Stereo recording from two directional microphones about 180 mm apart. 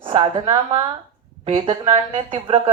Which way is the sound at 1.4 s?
30° right (ahead or behind).